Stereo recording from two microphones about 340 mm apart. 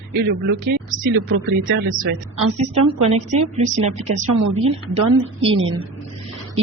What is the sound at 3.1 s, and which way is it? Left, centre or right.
Speech, centre.